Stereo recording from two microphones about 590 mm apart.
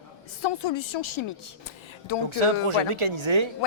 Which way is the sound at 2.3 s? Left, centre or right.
Right.